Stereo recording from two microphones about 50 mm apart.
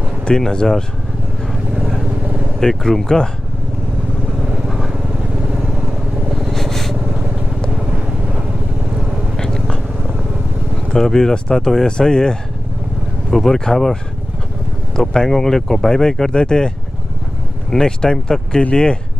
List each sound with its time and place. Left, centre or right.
0.2 s speech: centre
2.6 s speech: centre
4.6 s vehicle: centre
6.3 s vehicle: centre
9.4 s vehicle: centre
10.9 s speech: centre
15.0 s speech: centre